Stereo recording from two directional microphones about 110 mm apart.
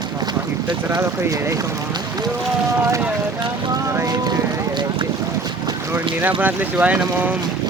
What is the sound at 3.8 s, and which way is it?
Boat, 30° right (ahead or behind).